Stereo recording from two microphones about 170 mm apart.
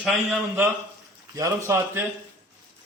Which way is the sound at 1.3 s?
15° right (ahead or behind).